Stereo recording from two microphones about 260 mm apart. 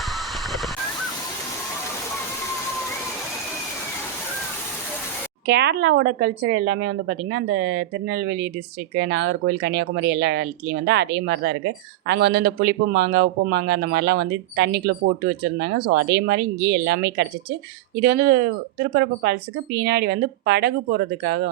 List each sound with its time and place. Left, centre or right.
5.5 s speech: right